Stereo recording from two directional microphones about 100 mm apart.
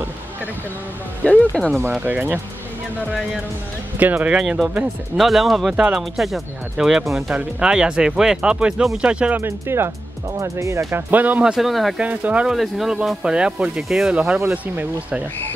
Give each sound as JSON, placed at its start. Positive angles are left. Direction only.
{"t": 1.2, "sound": "speech", "side_deg": 15}
{"t": 1.9, "sound": "speech", "side_deg": -15}
{"t": 4.0, "sound": "speech", "side_deg": -15}
{"t": 4.4, "sound": "speech", "side_deg": -5}
{"t": 9.4, "sound": "speech", "side_deg": -25}
{"t": 11.5, "sound": "speech", "side_deg": 0}
{"t": 12.0, "sound": "speech", "side_deg": -15}
{"t": 12.5, "sound": "speech", "side_deg": 0}